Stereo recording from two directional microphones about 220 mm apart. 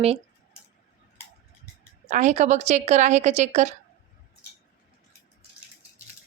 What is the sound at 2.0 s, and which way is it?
A woman's voice, 30° right (ahead or behind).